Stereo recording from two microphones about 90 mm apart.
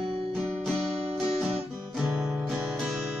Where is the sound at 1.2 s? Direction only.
Centre (ahead or behind).